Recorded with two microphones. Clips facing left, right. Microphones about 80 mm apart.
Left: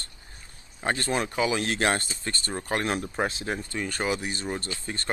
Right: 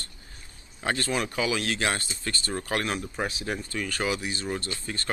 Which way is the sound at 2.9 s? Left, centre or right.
Left.